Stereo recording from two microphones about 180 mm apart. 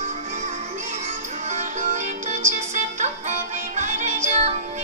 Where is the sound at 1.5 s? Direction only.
40° right (ahead or behind).